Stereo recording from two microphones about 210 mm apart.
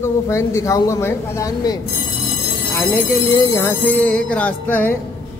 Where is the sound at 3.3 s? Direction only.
15° left (ahead or behind).